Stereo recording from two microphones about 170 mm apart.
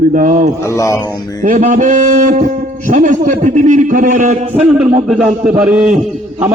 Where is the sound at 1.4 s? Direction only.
50° right (ahead or behind).